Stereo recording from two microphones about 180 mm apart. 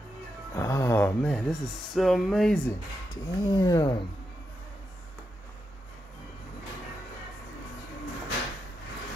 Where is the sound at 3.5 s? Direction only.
20° left (ahead or behind).